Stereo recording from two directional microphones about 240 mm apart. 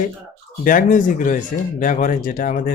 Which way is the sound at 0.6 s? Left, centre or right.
Left.